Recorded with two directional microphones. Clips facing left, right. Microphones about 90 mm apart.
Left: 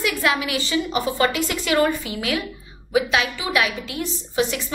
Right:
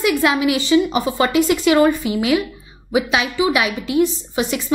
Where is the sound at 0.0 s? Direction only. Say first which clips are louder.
Right 6 dB; 20° right (ahead or behind).